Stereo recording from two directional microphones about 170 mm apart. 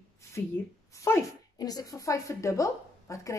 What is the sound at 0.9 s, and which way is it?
A woman's voice, 20° left (ahead or behind).